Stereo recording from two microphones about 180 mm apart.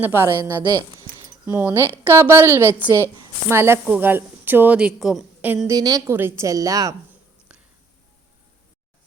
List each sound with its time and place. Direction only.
0.0 s speech: 15° right (ahead or behind)
5.7 s a woman's voice: 20° right (ahead or behind)